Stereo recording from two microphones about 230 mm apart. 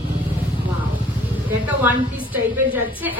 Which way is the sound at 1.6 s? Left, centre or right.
Centre.